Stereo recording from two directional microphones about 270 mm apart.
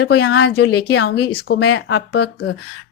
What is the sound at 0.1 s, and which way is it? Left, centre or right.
A woman's voice, left.